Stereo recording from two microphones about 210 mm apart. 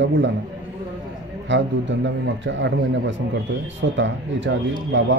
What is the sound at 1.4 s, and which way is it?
Speech, 60° right (ahead or behind).